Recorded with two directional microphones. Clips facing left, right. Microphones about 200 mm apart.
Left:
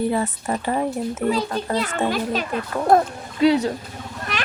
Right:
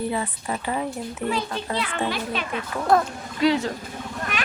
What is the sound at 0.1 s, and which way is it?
A child's voice, 45° left (ahead or behind).